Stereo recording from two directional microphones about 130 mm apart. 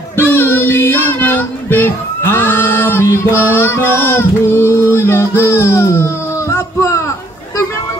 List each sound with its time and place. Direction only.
0.2 s child singing: 15° left (ahead or behind)
3.3 s music: 15° left (ahead or behind)
6.5 s a sound: 20° left (ahead or behind)